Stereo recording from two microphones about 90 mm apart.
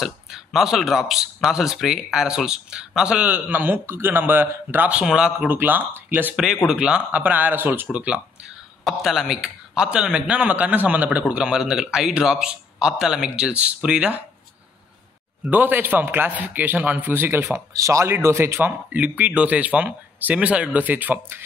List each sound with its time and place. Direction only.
0.0 s a man's voice: centre (ahead or behind); by 5.0 s 20° right (ahead or behind)
5.0 s a man's voice: 10° right (ahead or behind)
5.5 s a man's voice: 20° right (ahead or behind)
6.3 s a man's voice: 5° right (ahead or behind)
8.8 s a man's voice: centre (ahead or behind)
15.4 s a man's voice: 20° right (ahead or behind)